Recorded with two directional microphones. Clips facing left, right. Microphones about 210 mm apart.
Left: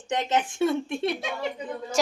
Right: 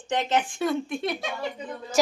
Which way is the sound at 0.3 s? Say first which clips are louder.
Left 3 dB; 25° left (ahead or behind).